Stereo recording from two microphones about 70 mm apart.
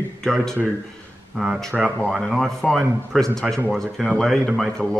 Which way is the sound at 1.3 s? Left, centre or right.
Centre.